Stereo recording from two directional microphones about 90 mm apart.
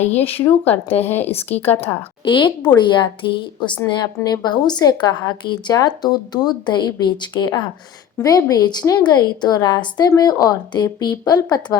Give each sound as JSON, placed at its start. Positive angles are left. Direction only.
{"t": 0.4, "sound": "speech", "side_deg": 20}
{"t": 2.2, "sound": "a woman's voice", "side_deg": 60}